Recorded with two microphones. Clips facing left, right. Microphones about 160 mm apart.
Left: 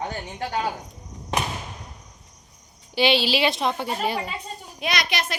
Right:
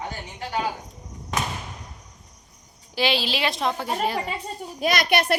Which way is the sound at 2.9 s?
Centre (ahead or behind).